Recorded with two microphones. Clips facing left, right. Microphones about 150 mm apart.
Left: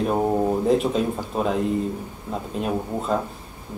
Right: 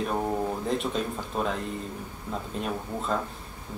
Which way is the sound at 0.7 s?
Centre (ahead or behind).